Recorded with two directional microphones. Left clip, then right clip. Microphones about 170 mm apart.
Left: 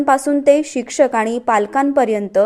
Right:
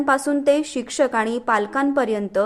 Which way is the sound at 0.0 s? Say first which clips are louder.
Left 5 dB; 20° left (ahead or behind).